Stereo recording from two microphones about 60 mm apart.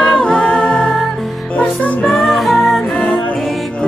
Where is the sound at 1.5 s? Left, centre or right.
Centre.